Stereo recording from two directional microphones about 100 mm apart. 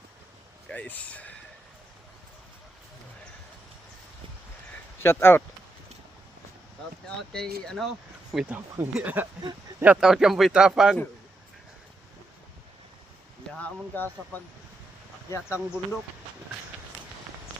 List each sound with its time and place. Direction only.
0.7 s speech: 15° left (ahead or behind)
5.0 s speech: 25° left (ahead or behind)
7.2 s speech: 5° left (ahead or behind)
8.8 s speech: 15° right (ahead or behind)
13.5 s speech: 15° left (ahead or behind)
15.3 s speech: 25° left (ahead or behind)